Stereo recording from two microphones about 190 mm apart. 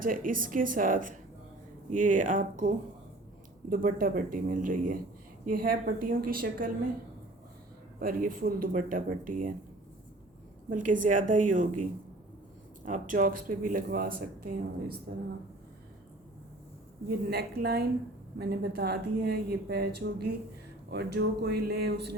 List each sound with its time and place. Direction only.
0.0 s speech: 45° right (ahead or behind)
7.9 s speech: 45° right (ahead or behind)
10.7 s speech: 45° right (ahead or behind)
17.1 s a woman's voice: 60° right (ahead or behind)